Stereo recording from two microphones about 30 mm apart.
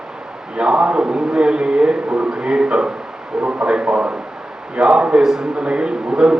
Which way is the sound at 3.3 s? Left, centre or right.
Centre.